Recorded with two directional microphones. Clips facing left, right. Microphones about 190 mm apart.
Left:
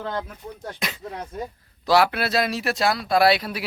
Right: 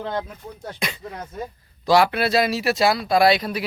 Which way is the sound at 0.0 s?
15° right (ahead or behind).